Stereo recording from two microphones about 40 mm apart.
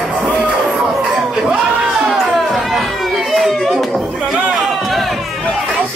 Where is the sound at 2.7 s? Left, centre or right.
Centre.